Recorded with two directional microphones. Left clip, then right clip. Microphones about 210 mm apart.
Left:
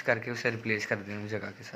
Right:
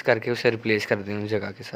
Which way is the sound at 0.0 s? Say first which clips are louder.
Right 8 dB; 55° right (ahead or behind).